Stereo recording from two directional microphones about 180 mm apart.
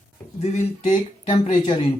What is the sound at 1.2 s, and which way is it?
Speech, 35° left (ahead or behind).